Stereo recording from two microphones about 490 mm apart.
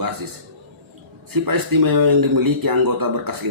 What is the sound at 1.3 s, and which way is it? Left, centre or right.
Speech, right.